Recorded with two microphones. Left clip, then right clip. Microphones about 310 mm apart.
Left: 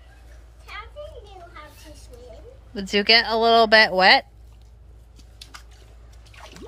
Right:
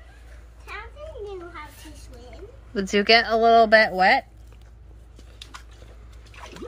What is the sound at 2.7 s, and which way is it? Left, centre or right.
Speech, centre.